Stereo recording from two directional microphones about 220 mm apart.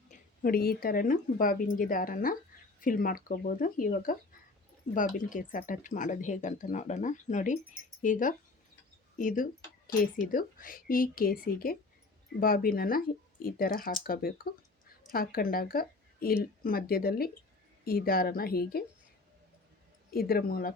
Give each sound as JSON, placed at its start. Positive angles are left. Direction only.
{"t": 0.1, "sound": "a woman's voice", "side_deg": 40}
{"t": 20.1, "sound": "a woman's voice", "side_deg": 45}